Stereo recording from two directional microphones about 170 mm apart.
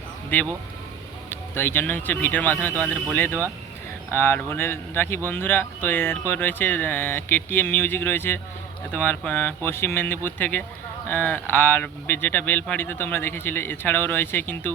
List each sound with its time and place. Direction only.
1.3 s speech: 15° left (ahead or behind)